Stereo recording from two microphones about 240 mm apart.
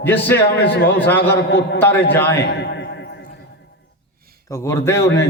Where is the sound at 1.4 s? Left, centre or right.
Left.